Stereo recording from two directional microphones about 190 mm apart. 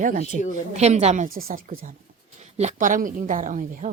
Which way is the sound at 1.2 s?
45° right (ahead or behind).